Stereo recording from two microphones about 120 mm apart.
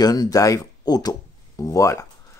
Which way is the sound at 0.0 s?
30° left (ahead or behind).